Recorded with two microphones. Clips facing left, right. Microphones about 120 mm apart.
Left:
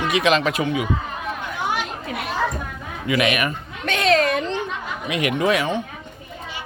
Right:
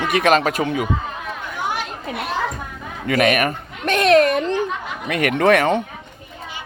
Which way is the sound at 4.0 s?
55° right (ahead or behind).